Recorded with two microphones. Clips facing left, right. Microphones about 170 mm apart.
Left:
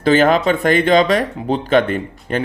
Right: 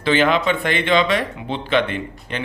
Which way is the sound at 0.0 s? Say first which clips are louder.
Left 4 dB; 40° left (ahead or behind).